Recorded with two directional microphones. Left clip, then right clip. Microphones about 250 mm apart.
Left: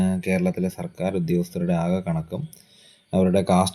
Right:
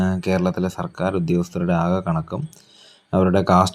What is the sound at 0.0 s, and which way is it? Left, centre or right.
Speech, centre.